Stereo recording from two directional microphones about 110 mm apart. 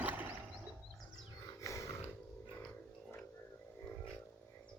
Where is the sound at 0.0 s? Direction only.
15° right (ahead or behind).